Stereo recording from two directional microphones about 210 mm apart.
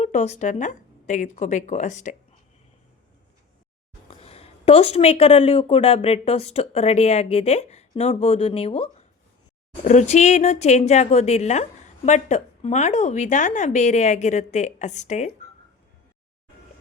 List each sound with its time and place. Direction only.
0.0 s speech: 35° left (ahead or behind)
4.1 s speech: 30° left (ahead or behind)